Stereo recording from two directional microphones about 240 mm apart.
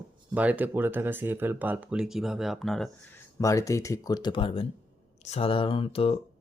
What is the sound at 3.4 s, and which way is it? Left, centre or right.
Speech, centre.